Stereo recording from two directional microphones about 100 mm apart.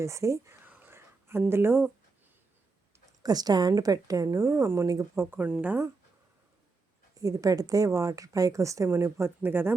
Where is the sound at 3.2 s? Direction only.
40° right (ahead or behind); by 5.8 s 15° right (ahead or behind).